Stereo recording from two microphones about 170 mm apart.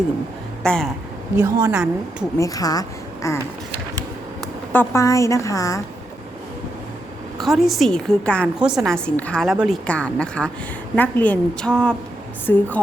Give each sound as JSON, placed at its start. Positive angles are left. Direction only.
{"t": 0.6, "sound": "speech", "side_deg": 5}
{"t": 1.4, "sound": "a woman's voice", "side_deg": -15}
{"t": 2.4, "sound": "a woman's voice", "side_deg": 20}
{"t": 4.7, "sound": "a woman's voice", "side_deg": 15}
{"t": 7.3, "sound": "a woman's voice", "side_deg": 0}
{"t": 8.5, "sound": "a woman's voice", "side_deg": -5}